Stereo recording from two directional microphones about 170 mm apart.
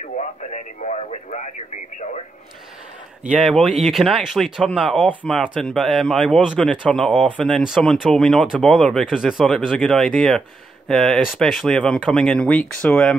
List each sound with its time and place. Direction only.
0.0 s speech: 45° left (ahead or behind)
3.3 s speech: centre (ahead or behind)